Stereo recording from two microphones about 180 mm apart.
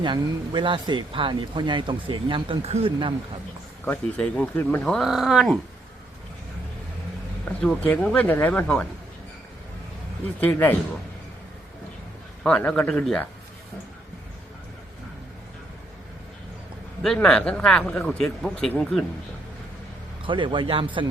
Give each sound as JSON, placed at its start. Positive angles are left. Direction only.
{"t": 0.0, "sound": "speech", "side_deg": -25}
{"t": 3.8, "sound": "speech", "side_deg": 10}
{"t": 7.4, "sound": "speech", "side_deg": 5}
{"t": 10.4, "sound": "speech", "side_deg": 10}
{"t": 12.4, "sound": "speech", "side_deg": 5}
{"t": 17.0, "sound": "speech", "side_deg": 5}
{"t": 20.2, "sound": "speech", "side_deg": -25}